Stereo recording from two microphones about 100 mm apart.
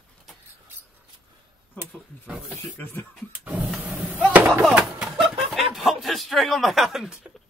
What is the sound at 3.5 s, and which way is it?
Printer, 15° right (ahead or behind).